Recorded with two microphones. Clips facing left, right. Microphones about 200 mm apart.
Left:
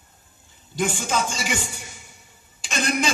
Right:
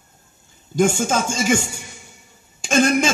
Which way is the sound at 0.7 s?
45° right (ahead or behind).